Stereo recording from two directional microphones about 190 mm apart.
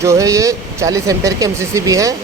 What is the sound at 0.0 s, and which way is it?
Speech, 15° right (ahead or behind).